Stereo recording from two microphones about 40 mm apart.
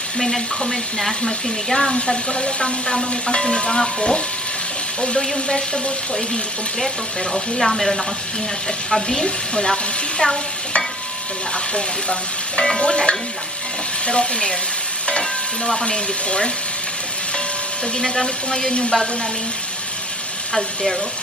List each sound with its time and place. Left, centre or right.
0.2 s a woman's voice: centre
1.2 s a woman's voice: centre
7.3 s a woman's voice: centre
9.2 s a woman's voice: centre
11.7 s speech: left
15.0 s stir: left
17.9 s speech: left